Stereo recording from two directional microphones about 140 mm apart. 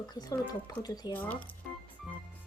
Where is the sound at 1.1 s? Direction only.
10° left (ahead or behind).